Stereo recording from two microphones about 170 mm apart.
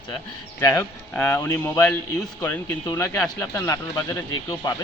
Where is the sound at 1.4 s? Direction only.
20° left (ahead or behind).